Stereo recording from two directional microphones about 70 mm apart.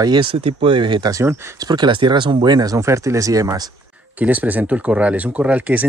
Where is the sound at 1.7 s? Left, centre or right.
Right.